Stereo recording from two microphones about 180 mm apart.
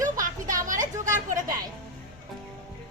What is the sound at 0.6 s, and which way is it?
Speech, 45° right (ahead or behind).